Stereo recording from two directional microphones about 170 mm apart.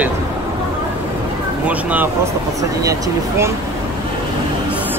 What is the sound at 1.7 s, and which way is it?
Speech, 10° right (ahead or behind).